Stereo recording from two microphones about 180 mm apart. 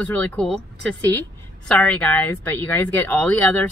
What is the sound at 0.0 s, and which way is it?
Speech, 10° left (ahead or behind).